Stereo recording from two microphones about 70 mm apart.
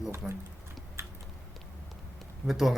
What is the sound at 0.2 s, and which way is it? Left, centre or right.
Speech, centre.